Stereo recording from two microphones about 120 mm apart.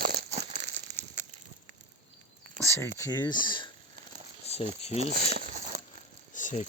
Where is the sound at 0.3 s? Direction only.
65° right (ahead or behind).